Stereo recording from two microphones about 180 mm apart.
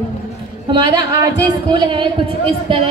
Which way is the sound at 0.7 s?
25° right (ahead or behind).